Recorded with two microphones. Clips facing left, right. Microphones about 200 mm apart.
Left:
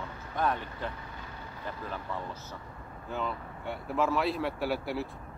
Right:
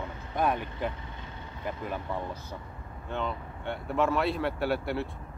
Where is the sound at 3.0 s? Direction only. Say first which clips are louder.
Right 2 dB; 5° left (ahead or behind).